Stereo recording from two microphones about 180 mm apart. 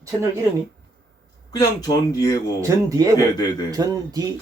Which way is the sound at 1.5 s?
20° left (ahead or behind).